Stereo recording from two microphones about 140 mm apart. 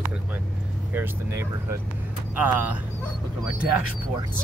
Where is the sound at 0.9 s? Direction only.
15° right (ahead or behind).